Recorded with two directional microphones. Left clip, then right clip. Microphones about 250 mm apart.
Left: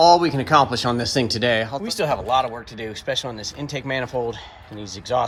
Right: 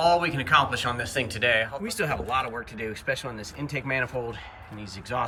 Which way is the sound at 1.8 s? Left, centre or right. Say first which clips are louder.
Left 6 dB; centre.